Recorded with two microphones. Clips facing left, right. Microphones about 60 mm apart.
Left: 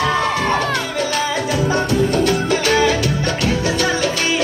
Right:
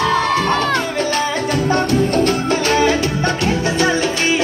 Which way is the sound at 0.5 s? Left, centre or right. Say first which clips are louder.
Right 2 dB; right.